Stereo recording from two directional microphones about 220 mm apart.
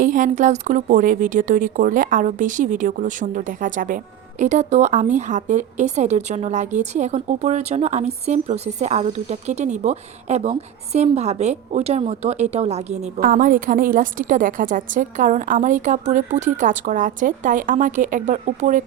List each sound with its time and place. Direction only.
0.0 s speech: 35° right (ahead or behind)